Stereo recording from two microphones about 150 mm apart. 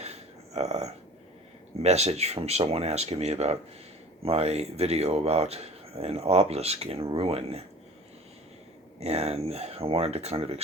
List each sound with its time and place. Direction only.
0.0 s a sound: 45° right (ahead or behind)
1.8 s speech: 45° right (ahead or behind)
9.0 s speech: 45° right (ahead or behind)